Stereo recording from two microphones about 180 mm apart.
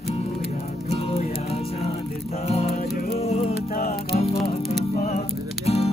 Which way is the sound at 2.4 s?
35° left (ahead or behind).